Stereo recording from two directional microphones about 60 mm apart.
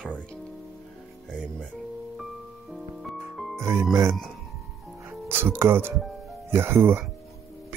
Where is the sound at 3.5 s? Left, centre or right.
Right.